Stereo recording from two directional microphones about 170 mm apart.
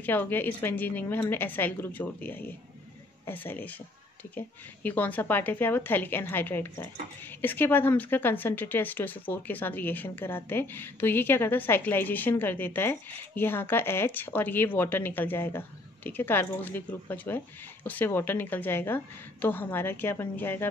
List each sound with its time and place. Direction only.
0.0 s a woman's voice: 10° left (ahead or behind)